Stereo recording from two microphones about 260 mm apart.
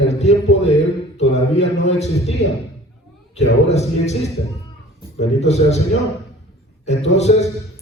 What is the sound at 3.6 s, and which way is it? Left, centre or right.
Speech, left.